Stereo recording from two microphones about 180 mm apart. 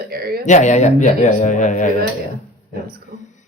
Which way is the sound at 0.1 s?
60° right (ahead or behind).